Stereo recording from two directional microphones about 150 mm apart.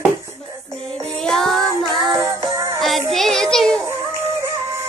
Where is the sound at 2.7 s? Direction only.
Centre (ahead or behind).